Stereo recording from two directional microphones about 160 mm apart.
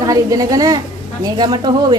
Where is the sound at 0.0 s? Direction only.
20° right (ahead or behind).